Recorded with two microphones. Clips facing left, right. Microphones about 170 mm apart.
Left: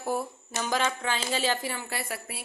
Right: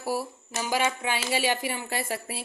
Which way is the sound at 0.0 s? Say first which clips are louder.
Even; 5° right (ahead or behind).